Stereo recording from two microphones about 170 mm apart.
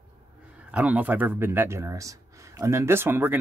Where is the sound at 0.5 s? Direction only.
5° right (ahead or behind).